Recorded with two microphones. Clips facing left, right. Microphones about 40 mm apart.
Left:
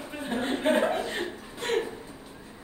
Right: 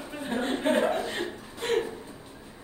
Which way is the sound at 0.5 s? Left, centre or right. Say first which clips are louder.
Left 1 dB; centre.